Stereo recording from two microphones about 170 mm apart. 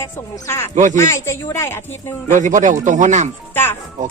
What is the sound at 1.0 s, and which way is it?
Speech, 15° left (ahead or behind).